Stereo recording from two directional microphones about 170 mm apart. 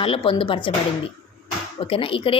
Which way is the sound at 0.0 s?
30° left (ahead or behind).